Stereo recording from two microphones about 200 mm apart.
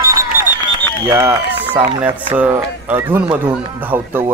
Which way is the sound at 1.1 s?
10° right (ahead or behind).